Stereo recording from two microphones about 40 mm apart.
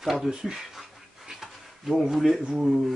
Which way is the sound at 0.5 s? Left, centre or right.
Centre.